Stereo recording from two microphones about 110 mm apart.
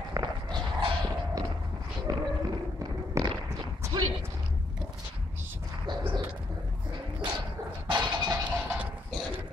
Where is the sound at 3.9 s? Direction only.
40° right (ahead or behind).